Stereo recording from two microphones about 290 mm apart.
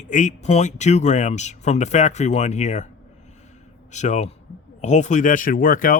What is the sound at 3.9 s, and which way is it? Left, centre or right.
Speech, left.